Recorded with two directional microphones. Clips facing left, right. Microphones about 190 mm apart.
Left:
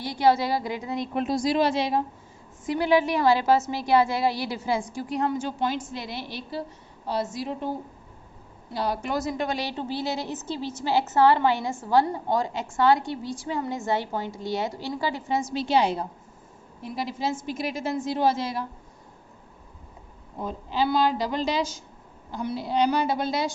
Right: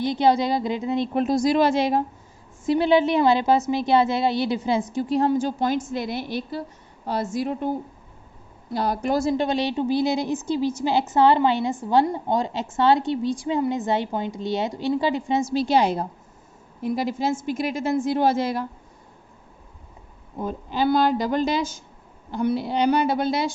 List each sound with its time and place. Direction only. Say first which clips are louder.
0.0 s a woman's voice: right 2 dB; 20° right (ahead or behind)
1.1 s a woman's voice: right 3 dB; 40° right (ahead or behind)
2.6 s a woman's voice: right 4 dB; 25° right (ahead or behind); by 7.7 s 50° right (ahead or behind)
8.7 s a woman's voice: right 4 dB; 45° right (ahead or behind); by 15.4 s 20° right (ahead or behind)
15.5 s a woman's voice: right 2 dB; 40° right (ahead or behind)
20.4 s a woman's voice: right 3 dB; 50° right (ahead or behind)